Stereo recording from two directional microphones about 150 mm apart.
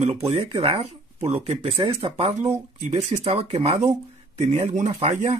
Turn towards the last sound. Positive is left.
turn(degrees=-45)  # may be behind; listen again after turning